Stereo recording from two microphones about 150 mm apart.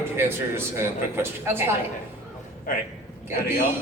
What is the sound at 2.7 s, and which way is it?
Speech, 70° left (ahead or behind).